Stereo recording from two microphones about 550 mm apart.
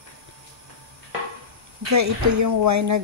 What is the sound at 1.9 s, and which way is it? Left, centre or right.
Speech, right.